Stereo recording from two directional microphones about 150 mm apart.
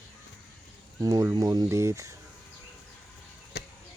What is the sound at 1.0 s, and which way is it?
Speech, 20° right (ahead or behind).